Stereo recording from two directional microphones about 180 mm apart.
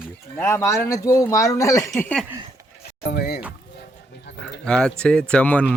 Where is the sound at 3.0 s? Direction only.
60° left (ahead or behind).